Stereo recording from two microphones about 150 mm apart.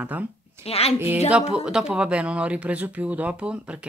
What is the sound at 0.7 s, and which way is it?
Speech, 45° left (ahead or behind).